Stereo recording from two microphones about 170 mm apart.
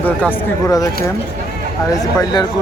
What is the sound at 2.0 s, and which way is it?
Speech, 25° left (ahead or behind).